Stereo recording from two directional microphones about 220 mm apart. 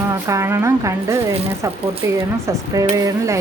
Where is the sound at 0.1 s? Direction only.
15° right (ahead or behind).